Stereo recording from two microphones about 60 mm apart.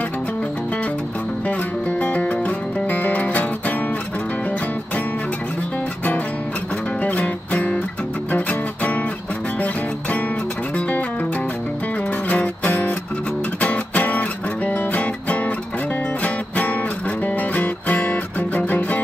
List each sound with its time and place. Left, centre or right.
1.9 s music: left
7.0 s music: left
12.3 s music: left